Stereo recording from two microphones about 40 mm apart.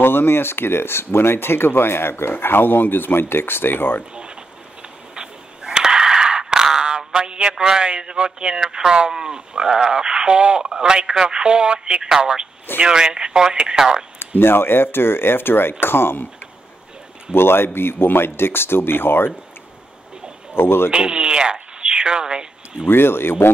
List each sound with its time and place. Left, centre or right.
0.0 s speech: left
2.3 s speech: left
5.1 s a sound: centre
7.0 s a man's voice: centre
14.4 s speech: left
17.3 s speech: left
20.5 s speech: left
20.9 s speech: right
22.8 s speech: left